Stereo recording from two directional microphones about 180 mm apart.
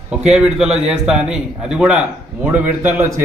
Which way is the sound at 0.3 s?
5° right (ahead or behind).